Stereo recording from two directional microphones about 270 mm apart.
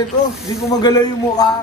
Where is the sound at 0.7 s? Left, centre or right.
Centre.